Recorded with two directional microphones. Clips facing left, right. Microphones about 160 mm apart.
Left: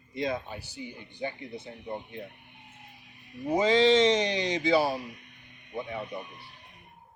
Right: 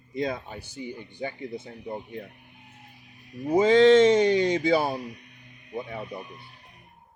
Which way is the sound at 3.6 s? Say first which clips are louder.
Right 5 dB; 50° right (ahead or behind).